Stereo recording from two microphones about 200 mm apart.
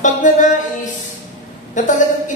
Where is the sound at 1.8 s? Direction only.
40° left (ahead or behind).